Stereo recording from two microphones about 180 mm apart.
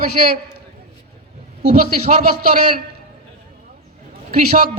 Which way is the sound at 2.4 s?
55° right (ahead or behind).